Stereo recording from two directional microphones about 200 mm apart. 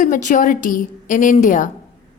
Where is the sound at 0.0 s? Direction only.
40° left (ahead or behind).